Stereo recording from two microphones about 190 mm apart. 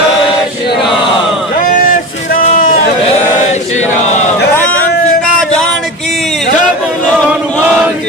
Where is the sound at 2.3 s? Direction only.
45° left (ahead or behind).